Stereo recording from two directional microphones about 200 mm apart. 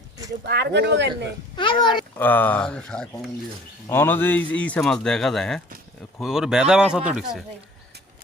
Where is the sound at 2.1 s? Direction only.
10° left (ahead or behind).